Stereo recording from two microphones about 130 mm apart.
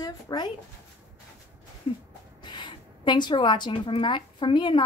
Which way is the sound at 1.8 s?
45° left (ahead or behind).